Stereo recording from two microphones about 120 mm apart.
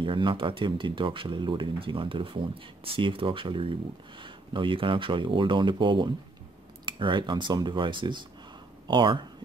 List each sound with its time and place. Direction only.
0.0 s speech: 45° right (ahead or behind)